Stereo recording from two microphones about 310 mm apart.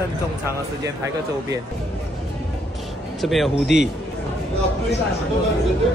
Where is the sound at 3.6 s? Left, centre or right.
Left.